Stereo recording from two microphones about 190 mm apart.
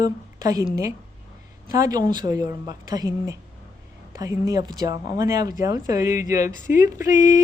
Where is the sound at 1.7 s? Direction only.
20° right (ahead or behind).